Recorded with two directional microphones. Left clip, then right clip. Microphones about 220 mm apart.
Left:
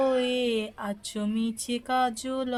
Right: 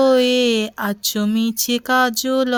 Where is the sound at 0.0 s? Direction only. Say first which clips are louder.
Right 11 dB; 45° right (ahead or behind).